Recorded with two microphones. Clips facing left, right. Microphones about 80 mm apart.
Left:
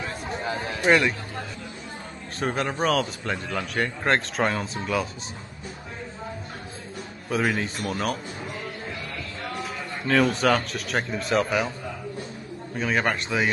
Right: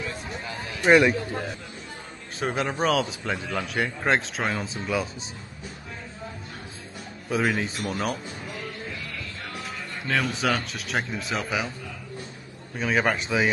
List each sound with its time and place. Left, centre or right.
0.0 s a sound: left
0.8 s speech: centre
2.4 s a man's voice: centre
7.2 s a man's voice: centre
9.6 s a man's voice: centre
12.7 s a man's voice: centre